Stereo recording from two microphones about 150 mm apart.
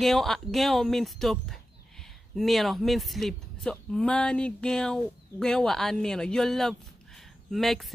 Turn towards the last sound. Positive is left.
turn(degrees=0)  # may be behind; listen again after turning